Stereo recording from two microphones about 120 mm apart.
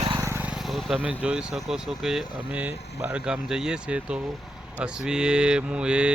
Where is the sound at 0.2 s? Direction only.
20° right (ahead or behind).